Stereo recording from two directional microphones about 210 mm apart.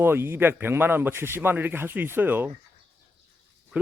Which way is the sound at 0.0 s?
10° right (ahead or behind).